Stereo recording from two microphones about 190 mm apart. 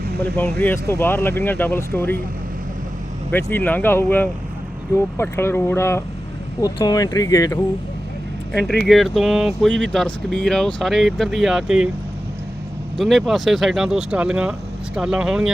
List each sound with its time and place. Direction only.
0.6 s speech: 10° left (ahead or behind)
3.3 s speech: 10° left (ahead or behind)
8.5 s speech: 5° left (ahead or behind)
13.0 s speech: centre (ahead or behind)